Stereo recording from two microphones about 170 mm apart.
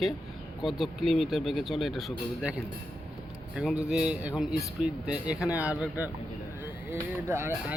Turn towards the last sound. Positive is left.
turn(degrees=-15)  # may be behind; listen again after turning